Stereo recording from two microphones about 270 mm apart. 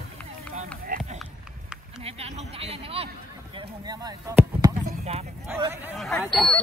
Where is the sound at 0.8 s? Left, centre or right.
Right.